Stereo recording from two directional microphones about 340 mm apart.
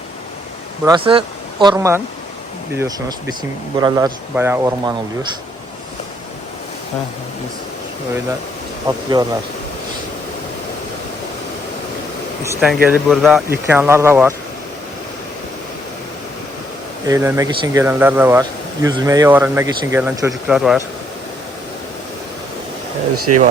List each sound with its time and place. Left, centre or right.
0.9 s speech: centre
8.9 s speech: centre
12.4 s speech: centre
17.1 s speech: centre
23.3 s speech: right